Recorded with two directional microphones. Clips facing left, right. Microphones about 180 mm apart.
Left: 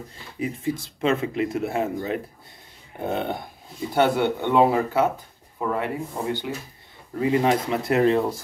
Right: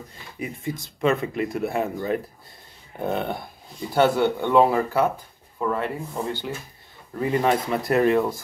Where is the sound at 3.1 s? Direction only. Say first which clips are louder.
Left 1 dB; 20° left (ahead or behind).